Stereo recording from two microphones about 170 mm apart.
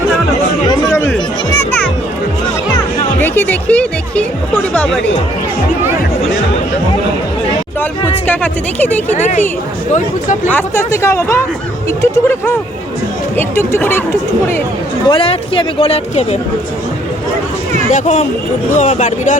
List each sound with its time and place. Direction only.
3.2 s music: 10° left (ahead or behind)
8.3 s speech: 10° left (ahead or behind)
9.1 s speech: 45° left (ahead or behind)
10.5 s speech: 15° left (ahead or behind)
15.0 s speech: 30° left (ahead or behind)
17.9 s speech: 40° left (ahead or behind)